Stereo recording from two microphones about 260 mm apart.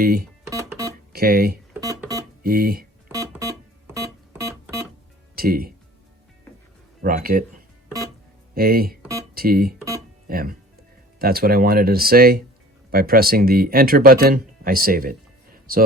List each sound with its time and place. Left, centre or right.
0.0 s speech: right
0.5 s music: centre
1.1 s speech: right
1.7 s keyboard: centre
2.4 s speech: right
3.1 s music: centre
3.9 s keyboard: centre
5.3 s speech: right
7.0 s speech: right
8.5 s speech: right